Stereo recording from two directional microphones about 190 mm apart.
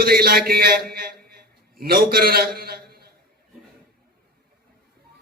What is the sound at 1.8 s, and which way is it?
A man's voice, 50° right (ahead or behind).